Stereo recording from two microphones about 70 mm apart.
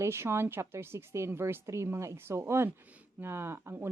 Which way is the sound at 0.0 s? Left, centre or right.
Right.